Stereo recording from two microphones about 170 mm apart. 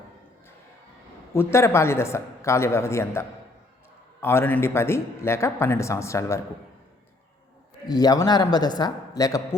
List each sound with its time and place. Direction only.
1.3 s speech: 15° left (ahead or behind)
7.9 s a man's voice: 20° left (ahead or behind)